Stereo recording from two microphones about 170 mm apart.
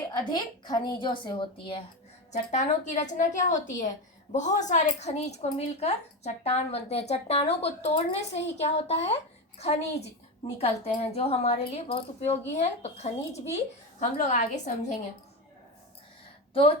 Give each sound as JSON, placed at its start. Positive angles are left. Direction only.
{"t": 0.3, "sound": "a woman's voice", "side_deg": 25}
{"t": 2.3, "sound": "a woman's voice", "side_deg": 45}